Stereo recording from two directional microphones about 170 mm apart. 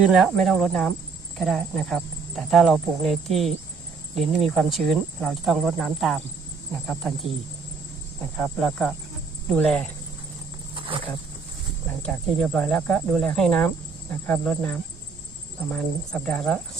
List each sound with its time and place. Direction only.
0.0 s speech: centre (ahead or behind)
8.4 s speech: 5° left (ahead or behind)
10.8 s cricket: 30° right (ahead or behind)
12.0 s speech: 5° left (ahead or behind)